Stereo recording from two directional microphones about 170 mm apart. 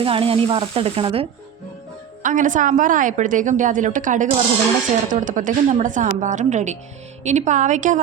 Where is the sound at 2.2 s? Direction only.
50° right (ahead or behind).